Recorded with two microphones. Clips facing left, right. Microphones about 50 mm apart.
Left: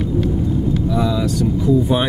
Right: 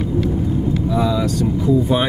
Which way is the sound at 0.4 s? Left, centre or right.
Right.